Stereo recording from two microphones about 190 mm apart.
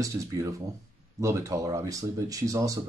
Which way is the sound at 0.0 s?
15° right (ahead or behind).